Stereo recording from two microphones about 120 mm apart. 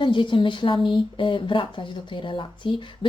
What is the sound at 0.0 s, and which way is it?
Speech, 40° left (ahead or behind).